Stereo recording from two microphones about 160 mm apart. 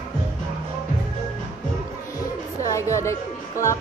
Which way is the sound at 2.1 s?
20° left (ahead or behind).